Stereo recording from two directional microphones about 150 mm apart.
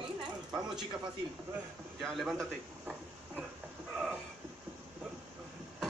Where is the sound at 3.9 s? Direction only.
5° right (ahead or behind).